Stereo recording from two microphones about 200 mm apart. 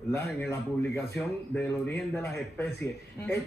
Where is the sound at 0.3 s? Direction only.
10° left (ahead or behind).